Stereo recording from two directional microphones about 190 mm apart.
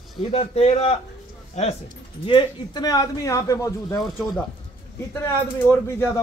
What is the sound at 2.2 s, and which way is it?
A man's voice, 25° left (ahead or behind).